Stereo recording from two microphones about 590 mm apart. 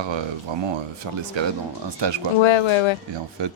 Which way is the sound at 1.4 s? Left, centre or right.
Right.